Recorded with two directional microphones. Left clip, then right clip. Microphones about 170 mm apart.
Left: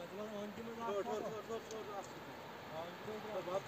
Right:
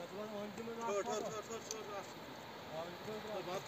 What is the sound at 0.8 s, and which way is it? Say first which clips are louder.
Speech: right 1 dB; 50° left (ahead or behind).